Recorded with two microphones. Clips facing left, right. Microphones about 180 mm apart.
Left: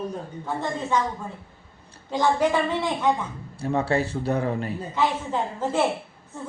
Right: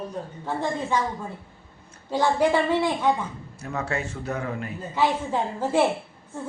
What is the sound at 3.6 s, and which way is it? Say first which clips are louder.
Speech: left 6 dB; 30° left (ahead or behind).